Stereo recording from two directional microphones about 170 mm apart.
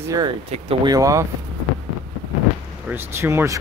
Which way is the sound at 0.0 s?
20° right (ahead or behind).